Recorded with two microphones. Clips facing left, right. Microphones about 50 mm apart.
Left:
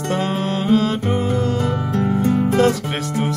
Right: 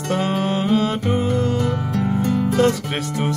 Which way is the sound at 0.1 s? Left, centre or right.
Centre.